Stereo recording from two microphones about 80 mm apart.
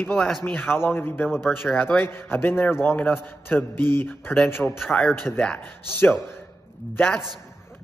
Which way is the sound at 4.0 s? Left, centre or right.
Left.